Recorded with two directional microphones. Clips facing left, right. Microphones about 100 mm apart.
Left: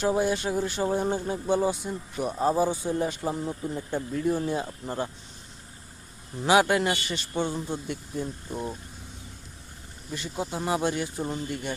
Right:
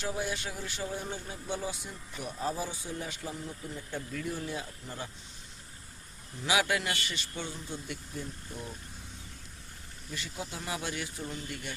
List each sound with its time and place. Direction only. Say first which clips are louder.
0.0 s speech: left 10 dB; 40° left (ahead or behind)
3.8 s speech: left 8 dB; 30° left (ahead or behind)
6.4 s speech: left 8 dB; 40° left (ahead or behind)
7.9 s speech: left 8 dB; 35° left (ahead or behind)
10.1 s speech: left 6 dB; 30° left (ahead or behind)
10.3 s speech: left 11 dB; 40° left (ahead or behind)